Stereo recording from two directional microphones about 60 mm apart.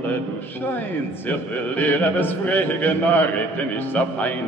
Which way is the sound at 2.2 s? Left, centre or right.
Left.